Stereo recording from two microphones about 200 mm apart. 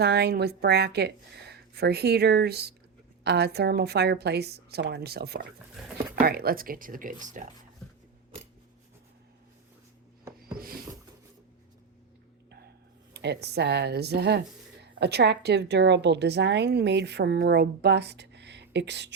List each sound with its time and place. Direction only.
0.0 s a woman's voice: 55° right (ahead or behind)
10.6 s a sound: 45° right (ahead or behind)
13.1 s a woman's voice: 55° right (ahead or behind)